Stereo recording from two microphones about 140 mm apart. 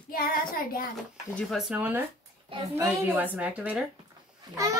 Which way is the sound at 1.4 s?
Centre (ahead or behind).